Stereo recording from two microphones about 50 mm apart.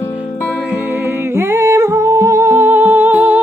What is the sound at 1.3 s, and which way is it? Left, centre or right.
Humming, right.